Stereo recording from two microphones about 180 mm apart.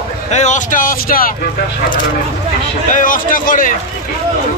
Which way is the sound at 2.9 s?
50° left (ahead or behind).